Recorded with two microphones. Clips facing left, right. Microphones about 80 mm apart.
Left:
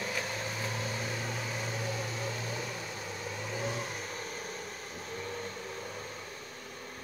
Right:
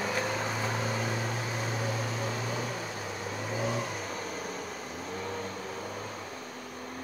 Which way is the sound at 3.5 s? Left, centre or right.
Centre.